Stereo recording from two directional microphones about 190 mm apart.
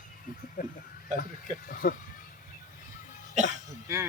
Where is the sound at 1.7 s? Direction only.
50° left (ahead or behind).